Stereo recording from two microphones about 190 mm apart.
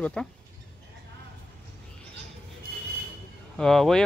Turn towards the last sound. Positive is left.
turn(degrees=0)  # may be behind; listen again after turning